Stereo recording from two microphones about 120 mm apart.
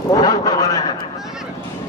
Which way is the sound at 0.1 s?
30° left (ahead or behind).